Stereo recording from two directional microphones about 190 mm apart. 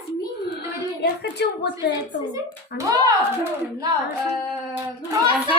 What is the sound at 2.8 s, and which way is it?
Speech, 20° right (ahead or behind).